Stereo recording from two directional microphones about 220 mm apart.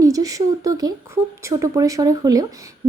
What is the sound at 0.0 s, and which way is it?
Speech, 15° right (ahead or behind).